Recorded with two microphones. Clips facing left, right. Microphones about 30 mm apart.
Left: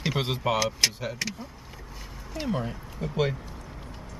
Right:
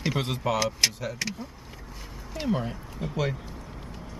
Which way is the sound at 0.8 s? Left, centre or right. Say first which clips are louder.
Even; centre.